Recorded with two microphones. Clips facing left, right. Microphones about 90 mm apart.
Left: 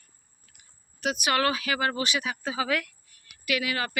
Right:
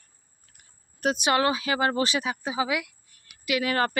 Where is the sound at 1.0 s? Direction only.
30° right (ahead or behind).